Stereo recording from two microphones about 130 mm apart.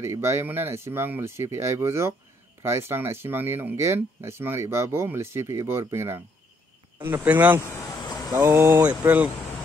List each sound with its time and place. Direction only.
0.0 s speech: 20° right (ahead or behind)